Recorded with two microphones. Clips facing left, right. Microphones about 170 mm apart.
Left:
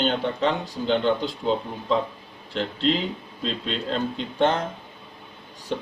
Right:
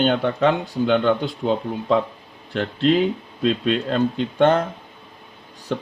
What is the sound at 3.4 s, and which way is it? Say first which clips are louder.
Speech: right 8 dB; 55° right (ahead or behind).